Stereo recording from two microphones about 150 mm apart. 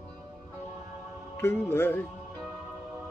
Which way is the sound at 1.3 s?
15° left (ahead or behind).